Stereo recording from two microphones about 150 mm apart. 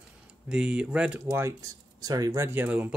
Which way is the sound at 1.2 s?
20° right (ahead or behind).